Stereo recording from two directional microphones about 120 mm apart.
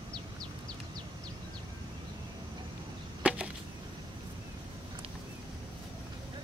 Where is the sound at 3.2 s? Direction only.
10° right (ahead or behind).